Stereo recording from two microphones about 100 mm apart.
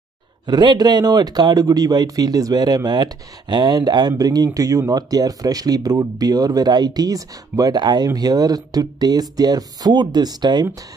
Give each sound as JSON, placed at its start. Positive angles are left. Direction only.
{"t": 0.5, "sound": "speech", "side_deg": -45}